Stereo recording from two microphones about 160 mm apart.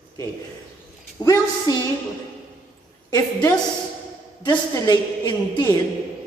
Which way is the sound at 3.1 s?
20° left (ahead or behind).